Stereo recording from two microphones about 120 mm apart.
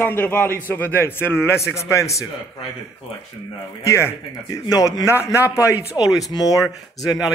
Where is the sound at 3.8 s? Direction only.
25° left (ahead or behind).